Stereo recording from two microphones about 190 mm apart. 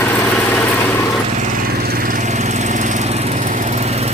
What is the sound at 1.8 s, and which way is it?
Lawn mower, 50° right (ahead or behind).